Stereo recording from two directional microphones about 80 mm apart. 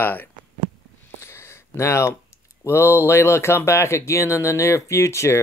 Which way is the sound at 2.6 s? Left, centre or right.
Left.